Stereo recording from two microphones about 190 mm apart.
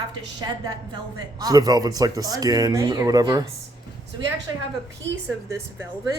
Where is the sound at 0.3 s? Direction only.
20° right (ahead or behind).